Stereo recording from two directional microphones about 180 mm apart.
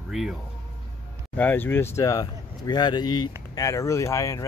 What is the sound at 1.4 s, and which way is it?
Speech, 10° left (ahead or behind).